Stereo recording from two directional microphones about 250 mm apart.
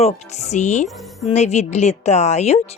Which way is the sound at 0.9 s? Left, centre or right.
Centre.